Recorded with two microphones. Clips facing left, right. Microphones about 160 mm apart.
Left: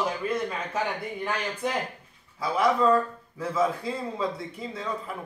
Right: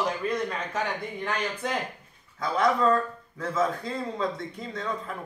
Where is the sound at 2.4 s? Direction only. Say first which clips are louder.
Left 1 dB; 5° left (ahead or behind).